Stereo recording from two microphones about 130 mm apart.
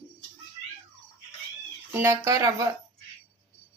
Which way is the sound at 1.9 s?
25° right (ahead or behind).